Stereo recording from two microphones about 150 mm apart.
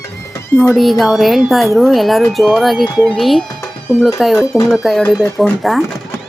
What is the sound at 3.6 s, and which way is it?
Music, 15° left (ahead or behind).